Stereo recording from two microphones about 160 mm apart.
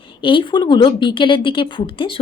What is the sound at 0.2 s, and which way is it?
A woman's voice, 30° left (ahead or behind).